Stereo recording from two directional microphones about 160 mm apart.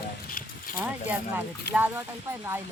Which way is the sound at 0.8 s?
10° right (ahead or behind).